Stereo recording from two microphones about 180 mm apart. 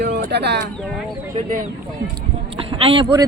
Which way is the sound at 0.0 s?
65° right (ahead or behind).